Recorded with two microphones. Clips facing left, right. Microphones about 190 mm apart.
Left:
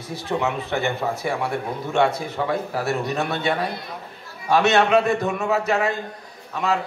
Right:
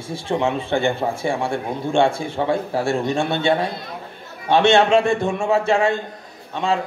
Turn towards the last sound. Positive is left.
turn(degrees=-25)  # may be behind; listen again after turning